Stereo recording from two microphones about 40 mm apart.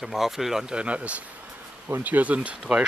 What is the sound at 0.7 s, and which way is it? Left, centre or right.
Speech, right.